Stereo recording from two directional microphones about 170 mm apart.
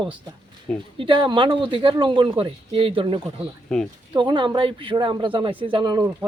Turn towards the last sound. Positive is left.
turn(degrees=-25)  # may be behind; listen again after turning